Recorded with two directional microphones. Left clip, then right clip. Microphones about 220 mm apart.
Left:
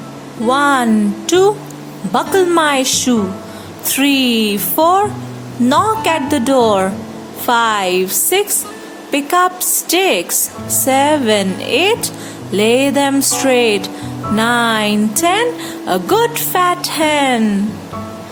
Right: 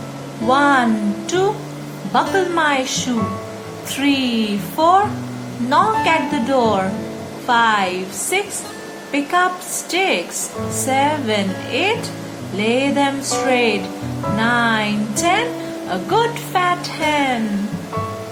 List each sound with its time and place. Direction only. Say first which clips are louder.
0.4 s speech: left 2 dB; 50° left (ahead or behind)